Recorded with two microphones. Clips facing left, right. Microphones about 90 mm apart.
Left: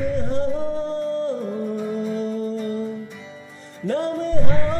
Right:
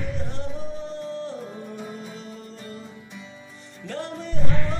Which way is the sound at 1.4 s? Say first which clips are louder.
Left 10 dB; centre (ahead or behind).